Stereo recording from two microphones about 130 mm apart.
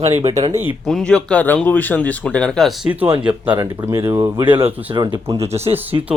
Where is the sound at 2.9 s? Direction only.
15° right (ahead or behind).